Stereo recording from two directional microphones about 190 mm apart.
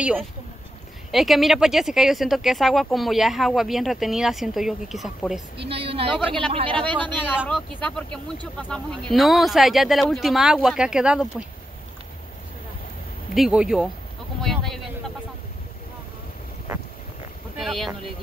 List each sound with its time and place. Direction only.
0.0 s speech: 5° right (ahead or behind)
5.7 s a woman's voice: 30° right (ahead or behind)
6.9 s speech: 10° left (ahead or behind)
13.3 s speech: 5° right (ahead or behind)
17.6 s speech: centre (ahead or behind)